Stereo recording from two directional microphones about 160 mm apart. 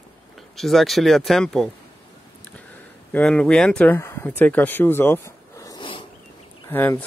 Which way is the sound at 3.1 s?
5° left (ahead or behind).